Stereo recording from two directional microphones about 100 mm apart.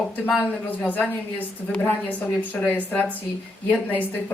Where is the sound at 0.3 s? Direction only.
15° left (ahead or behind).